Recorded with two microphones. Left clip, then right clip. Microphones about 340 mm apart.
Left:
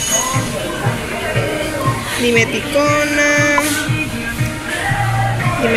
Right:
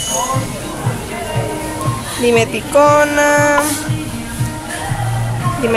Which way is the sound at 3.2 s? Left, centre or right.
Right.